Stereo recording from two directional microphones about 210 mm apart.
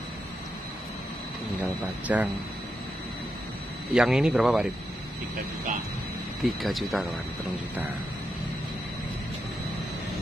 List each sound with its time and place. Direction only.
1.6 s speech: 5° right (ahead or behind)
3.9 s speech: centre (ahead or behind)
6.4 s speech: centre (ahead or behind)